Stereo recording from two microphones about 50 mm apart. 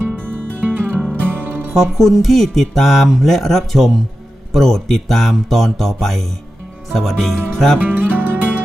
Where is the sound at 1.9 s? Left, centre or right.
Centre.